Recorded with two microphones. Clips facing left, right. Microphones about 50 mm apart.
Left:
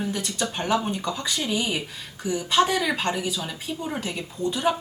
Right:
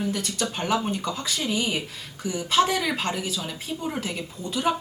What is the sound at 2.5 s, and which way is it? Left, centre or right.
A woman's voice, centre.